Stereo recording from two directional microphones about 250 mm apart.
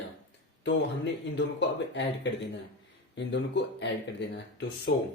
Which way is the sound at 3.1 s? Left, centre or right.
Left.